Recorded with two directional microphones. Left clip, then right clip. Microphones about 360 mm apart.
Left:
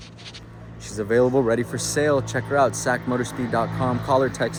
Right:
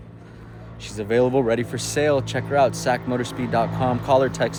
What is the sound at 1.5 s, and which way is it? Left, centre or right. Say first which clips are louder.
Speech: even; centre.